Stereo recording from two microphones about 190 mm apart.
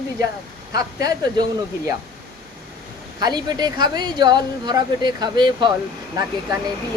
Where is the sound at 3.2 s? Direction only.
20° right (ahead or behind).